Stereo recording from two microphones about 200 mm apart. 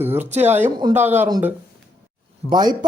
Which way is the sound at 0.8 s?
20° right (ahead or behind).